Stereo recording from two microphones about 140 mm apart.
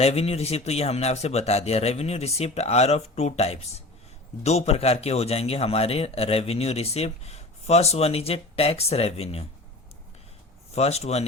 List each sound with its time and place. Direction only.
0.0 s speech: 50° left (ahead or behind)
10.7 s speech: 50° left (ahead or behind)